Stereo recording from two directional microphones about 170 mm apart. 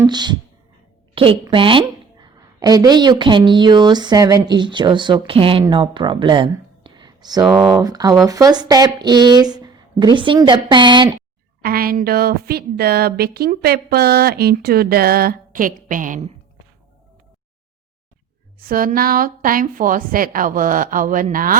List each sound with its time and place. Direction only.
0.0 s a woman's voice: 25° right (ahead or behind)
7.4 s speech: centre (ahead or behind)
7.8 s speech: 20° right (ahead or behind)
11.6 s a woman's voice: 60° right (ahead or behind)
18.6 s a woman's voice: 55° right (ahead or behind)